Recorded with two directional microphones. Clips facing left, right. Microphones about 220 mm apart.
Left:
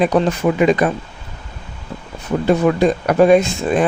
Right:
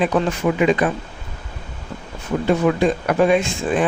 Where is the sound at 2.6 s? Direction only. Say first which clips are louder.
Left 3 dB; 40° left (ahead or behind).